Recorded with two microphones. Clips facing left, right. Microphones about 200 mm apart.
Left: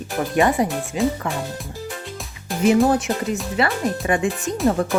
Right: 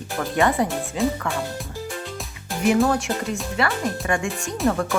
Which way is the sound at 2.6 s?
20° left (ahead or behind).